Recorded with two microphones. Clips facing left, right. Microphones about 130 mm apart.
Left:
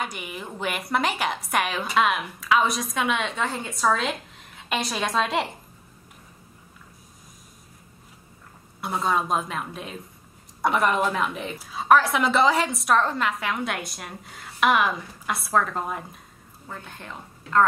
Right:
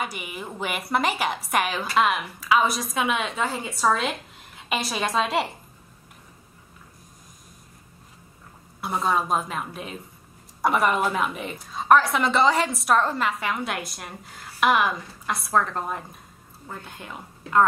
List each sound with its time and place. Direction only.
0.0 s a woman's voice: centre (ahead or behind)
8.8 s a woman's voice: centre (ahead or behind)
16.6 s a woman's voice: 15° right (ahead or behind)